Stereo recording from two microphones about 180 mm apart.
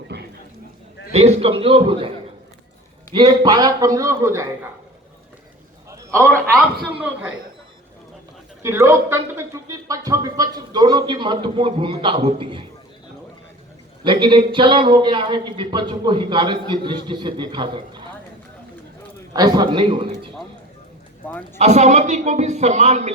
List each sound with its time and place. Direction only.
0.1 s a sound: 70° right (ahead or behind)
1.1 s a man's voice: 35° right (ahead or behind); by 4.4 s 15° right (ahead or behind)
7.0 s a man's voice: 5° right (ahead or behind)
8.6 s a man's voice: 15° right (ahead or behind)
14.0 s a man's voice: 25° right (ahead or behind)
19.3 s a man's voice: 20° right (ahead or behind)
21.2 s a man's voice: 10° left (ahead or behind)
21.6 s a man's voice: 40° right (ahead or behind)